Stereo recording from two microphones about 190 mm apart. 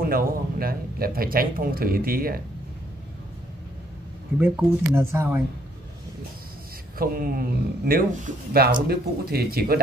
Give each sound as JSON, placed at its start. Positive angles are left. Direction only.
{"t": 0.0, "sound": "speech", "side_deg": -50}
{"t": 4.4, "sound": "speech", "side_deg": -10}
{"t": 7.0, "sound": "speech", "side_deg": -50}